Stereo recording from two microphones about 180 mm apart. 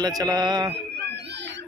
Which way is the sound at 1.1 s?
70° right (ahead or behind).